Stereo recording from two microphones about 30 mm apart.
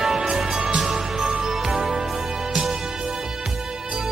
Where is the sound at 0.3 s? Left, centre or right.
Centre.